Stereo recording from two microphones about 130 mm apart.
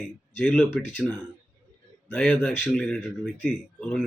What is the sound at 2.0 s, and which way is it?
Speech, 10° left (ahead or behind).